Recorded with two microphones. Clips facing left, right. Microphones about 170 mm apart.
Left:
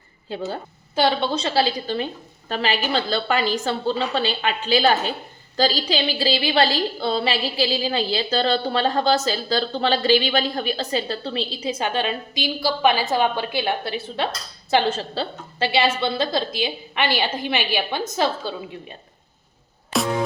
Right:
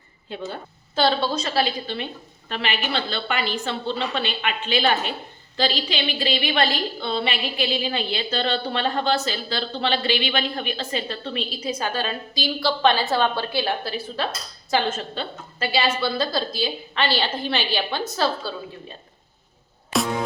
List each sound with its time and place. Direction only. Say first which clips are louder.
0.9 s a woman's voice: left 1 dB; 15° left (ahead or behind)
1.3 s a woman's voice: left 2 dB; 30° left (ahead or behind)
19.9 s music: even; centre (ahead or behind)